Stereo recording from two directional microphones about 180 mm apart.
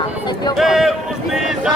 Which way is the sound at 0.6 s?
Centre (ahead or behind).